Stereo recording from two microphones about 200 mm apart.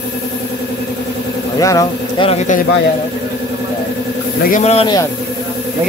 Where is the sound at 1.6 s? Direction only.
15° left (ahead or behind).